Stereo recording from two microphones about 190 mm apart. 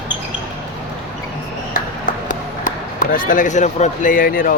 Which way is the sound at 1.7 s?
45° left (ahead or behind).